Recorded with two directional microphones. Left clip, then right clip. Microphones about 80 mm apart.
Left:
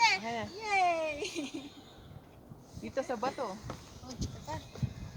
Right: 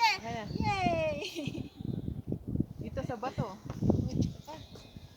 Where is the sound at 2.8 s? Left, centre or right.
Left.